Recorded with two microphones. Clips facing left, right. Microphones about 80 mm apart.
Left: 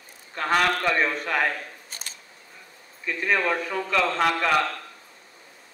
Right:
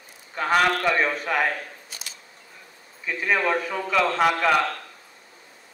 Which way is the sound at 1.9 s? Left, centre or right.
Left.